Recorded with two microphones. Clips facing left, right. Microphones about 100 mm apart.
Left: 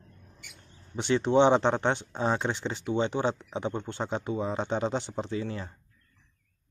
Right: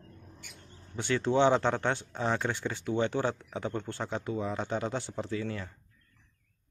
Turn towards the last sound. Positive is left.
turn(degrees=25)  # may be behind; listen again after turning